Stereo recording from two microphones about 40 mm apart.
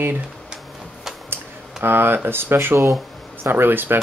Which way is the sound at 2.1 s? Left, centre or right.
Right.